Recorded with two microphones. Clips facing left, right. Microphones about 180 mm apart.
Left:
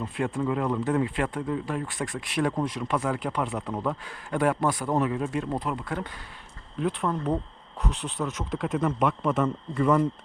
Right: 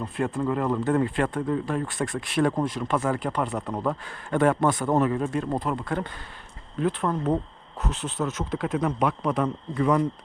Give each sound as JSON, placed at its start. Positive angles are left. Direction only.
{"t": 0.0, "sound": "speech", "side_deg": 0}